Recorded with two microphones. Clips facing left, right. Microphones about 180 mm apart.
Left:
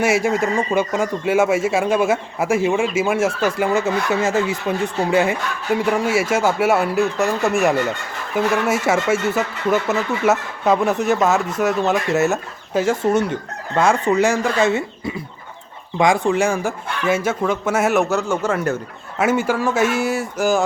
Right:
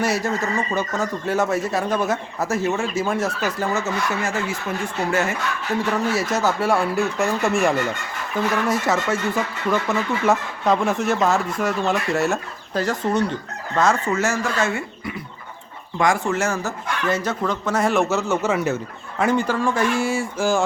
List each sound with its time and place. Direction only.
0.0 s speech: 10° left (ahead or behind); by 18.8 s 5° right (ahead or behind)
19.2 s speech: 5° left (ahead or behind)